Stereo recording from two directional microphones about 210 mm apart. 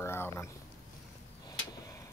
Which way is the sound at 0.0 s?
10° left (ahead or behind).